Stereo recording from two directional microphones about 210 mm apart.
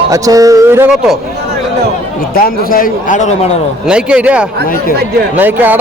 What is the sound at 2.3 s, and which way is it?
A man's voice, 45° left (ahead or behind).